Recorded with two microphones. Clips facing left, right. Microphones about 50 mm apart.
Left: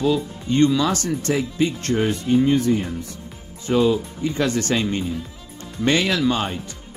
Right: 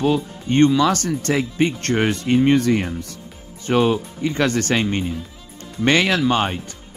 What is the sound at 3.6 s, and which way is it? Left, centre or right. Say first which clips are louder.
Speech: right 1 dB; right.